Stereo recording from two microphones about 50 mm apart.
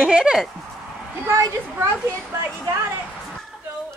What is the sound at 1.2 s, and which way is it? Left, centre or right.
Speech, right.